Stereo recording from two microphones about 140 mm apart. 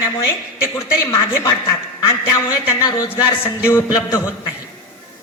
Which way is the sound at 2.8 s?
25° left (ahead or behind).